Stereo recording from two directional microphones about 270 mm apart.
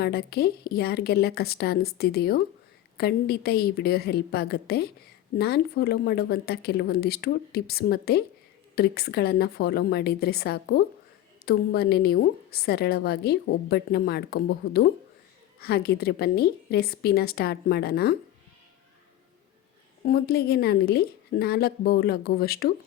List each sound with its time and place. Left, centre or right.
0.0 s a woman's voice: left
20.1 s a woman's voice: left